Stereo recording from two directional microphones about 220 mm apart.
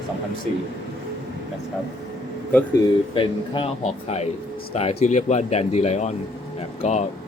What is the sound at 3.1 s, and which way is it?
Speech, 25° left (ahead or behind).